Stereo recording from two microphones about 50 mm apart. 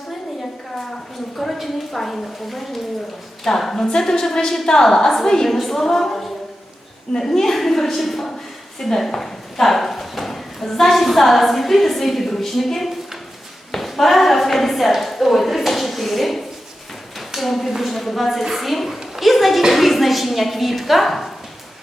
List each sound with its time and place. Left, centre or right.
1.4 s a woman's voice: centre
13.7 s a sound: centre
17.2 s a woman's voice: centre